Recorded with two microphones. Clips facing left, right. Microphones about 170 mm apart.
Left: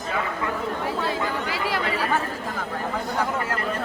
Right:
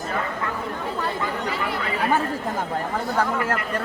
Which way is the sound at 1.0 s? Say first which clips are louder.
Even; 90° left.